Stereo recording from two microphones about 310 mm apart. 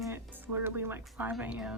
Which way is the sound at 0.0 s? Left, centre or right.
Centre.